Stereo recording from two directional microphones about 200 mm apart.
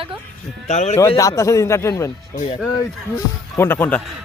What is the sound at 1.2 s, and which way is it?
Speech, 15° left (ahead or behind).